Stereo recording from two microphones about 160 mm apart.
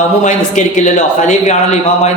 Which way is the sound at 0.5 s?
50° left (ahead or behind).